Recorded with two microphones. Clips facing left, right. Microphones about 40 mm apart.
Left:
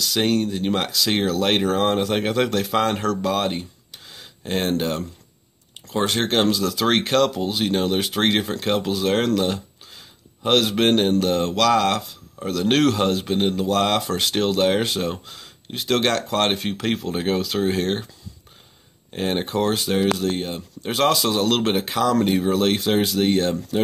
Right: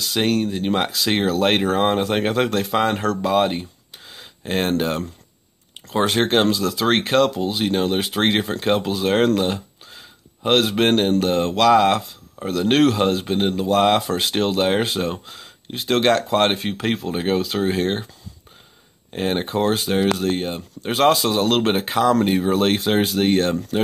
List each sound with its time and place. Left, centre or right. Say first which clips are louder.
0.2 s speech: right 1 dB; centre
4.1 s a sound: right 2 dB; centre
4.5 s speech: right 2 dB; right
6.2 s speech: right 2 dB; centre
9.4 s a sound: right 1 dB; centre
11.2 s speech: right 2 dB; centre
19.1 s speech: right 1 dB; centre
20.2 s speech: right 2 dB; right